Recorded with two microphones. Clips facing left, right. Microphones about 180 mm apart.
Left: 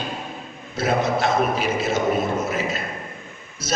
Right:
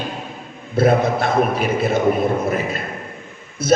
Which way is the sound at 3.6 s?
60° right (ahead or behind).